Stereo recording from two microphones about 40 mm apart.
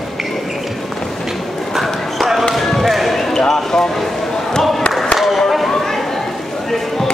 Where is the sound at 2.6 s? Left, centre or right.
Centre.